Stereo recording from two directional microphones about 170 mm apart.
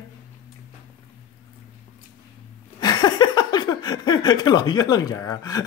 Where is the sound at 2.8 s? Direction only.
25° left (ahead or behind).